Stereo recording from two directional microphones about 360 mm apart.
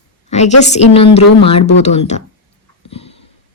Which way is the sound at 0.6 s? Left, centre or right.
Centre.